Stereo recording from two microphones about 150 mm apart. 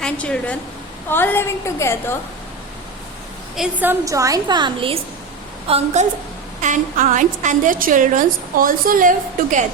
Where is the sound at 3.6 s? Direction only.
10° right (ahead or behind).